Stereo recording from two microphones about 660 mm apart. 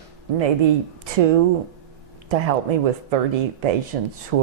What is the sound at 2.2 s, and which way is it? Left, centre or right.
Speech, right.